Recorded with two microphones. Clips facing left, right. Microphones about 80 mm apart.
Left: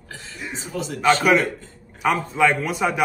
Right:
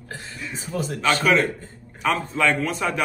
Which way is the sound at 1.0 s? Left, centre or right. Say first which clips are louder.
Left 3 dB; centre.